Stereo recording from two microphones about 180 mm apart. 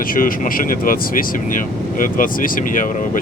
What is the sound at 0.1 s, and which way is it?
Speech, 50° left (ahead or behind).